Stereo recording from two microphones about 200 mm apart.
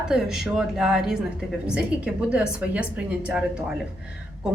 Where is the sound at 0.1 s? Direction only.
Centre (ahead or behind).